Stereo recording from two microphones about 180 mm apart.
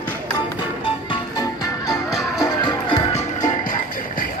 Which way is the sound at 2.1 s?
Centre (ahead or behind).